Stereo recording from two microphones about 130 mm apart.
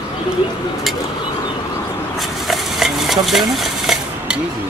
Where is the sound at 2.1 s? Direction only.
Centre (ahead or behind).